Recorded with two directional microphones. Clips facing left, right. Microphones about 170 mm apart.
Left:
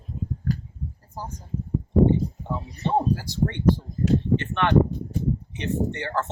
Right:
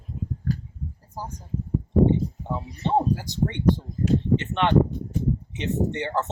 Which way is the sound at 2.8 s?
20° right (ahead or behind).